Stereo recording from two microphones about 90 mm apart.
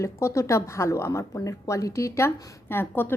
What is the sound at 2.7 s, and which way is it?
Speech, 25° left (ahead or behind).